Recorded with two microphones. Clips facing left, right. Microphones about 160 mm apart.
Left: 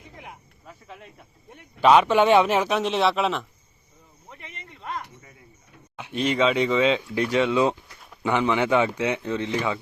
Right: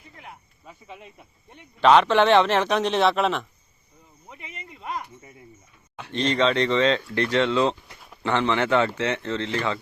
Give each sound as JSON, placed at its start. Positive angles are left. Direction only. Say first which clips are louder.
{"t": 0.6, "sound": "speech", "louder": "right 1 dB", "side_deg": 0}
{"t": 6.0, "sound": "speech", "louder": "even", "side_deg": 10}